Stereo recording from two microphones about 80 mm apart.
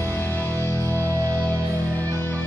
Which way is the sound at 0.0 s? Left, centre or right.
Left.